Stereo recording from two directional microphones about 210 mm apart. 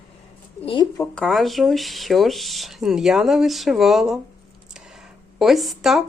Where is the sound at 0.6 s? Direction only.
25° left (ahead or behind).